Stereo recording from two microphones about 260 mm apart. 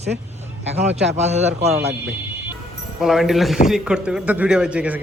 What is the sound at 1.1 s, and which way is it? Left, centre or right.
Speech, right.